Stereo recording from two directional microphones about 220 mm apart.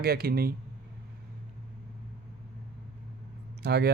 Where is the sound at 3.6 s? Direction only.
50° right (ahead or behind).